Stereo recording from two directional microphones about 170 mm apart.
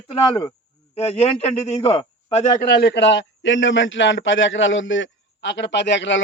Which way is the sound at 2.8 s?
80° left.